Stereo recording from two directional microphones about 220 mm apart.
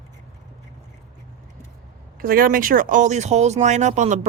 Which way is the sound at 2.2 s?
40° right (ahead or behind).